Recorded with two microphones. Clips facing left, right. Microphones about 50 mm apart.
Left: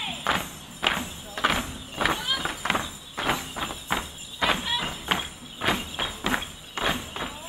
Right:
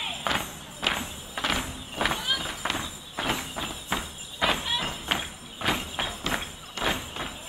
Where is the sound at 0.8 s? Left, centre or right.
Centre.